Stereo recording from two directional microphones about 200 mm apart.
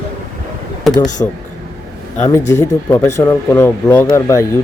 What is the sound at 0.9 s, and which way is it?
Speech, 20° left (ahead or behind).